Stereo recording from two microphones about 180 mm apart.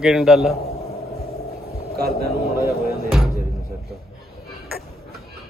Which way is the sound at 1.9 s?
60° right (ahead or behind).